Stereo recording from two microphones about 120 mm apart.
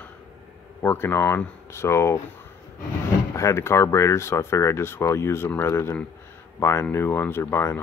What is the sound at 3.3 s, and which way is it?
Speech, 25° left (ahead or behind).